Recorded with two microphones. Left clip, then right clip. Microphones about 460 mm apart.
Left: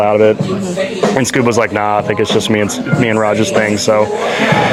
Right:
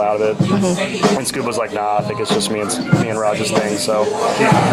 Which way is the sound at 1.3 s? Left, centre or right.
Left.